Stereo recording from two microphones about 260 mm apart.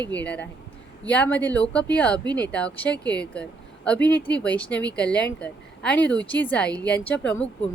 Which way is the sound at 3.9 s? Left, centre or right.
Left.